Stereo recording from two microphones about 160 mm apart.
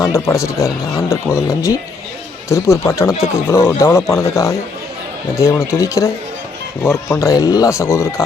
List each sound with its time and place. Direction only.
0.0 s speech: 20° left (ahead or behind)